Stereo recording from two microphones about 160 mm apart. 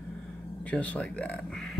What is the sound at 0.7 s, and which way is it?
Speech, 10° left (ahead or behind).